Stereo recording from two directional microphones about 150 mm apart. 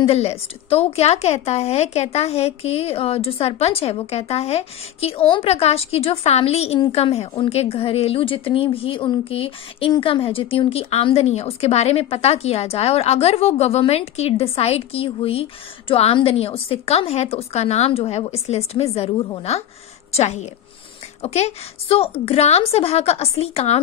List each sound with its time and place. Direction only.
0.0 s a woman's voice: 45° left (ahead or behind)